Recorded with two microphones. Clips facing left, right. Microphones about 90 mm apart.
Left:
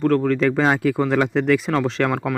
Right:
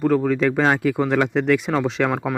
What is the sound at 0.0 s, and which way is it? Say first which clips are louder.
Speech: left 1 dB; 10° right (ahead or behind).